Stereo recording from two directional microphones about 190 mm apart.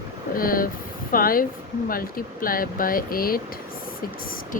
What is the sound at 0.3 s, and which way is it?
Speech, 50° left (ahead or behind).